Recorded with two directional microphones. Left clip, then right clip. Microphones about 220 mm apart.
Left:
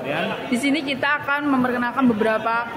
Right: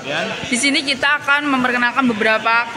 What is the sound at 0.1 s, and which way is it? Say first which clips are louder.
A man's voice: right 4 dB; 5° left (ahead or behind).